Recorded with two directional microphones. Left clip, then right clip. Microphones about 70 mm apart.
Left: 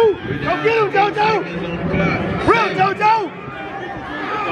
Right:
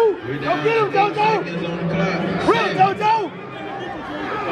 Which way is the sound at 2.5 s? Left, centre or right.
Left.